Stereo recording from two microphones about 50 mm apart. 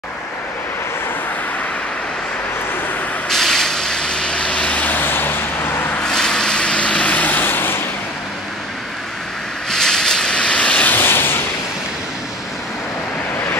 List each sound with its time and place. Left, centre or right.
3.3 s vehicle: centre
4.7 s vehicle: left
6.0 s vehicle: centre; by 7.8 s left
9.7 s vehicle: centre
10.9 s a sound: left